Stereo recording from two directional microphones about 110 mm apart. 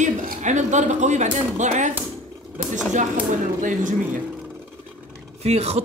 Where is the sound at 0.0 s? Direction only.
90° right.